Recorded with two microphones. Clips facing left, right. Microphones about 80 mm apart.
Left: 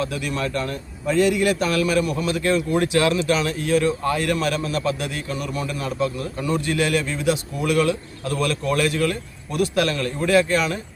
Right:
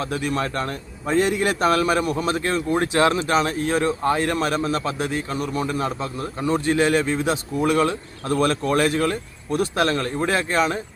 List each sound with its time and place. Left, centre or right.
0.0 s speech: right